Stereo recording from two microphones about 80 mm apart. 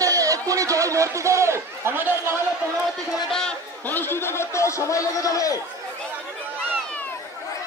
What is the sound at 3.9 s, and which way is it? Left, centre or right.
Speech, left.